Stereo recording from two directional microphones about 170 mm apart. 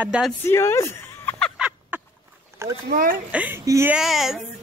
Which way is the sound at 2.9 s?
60° right (ahead or behind).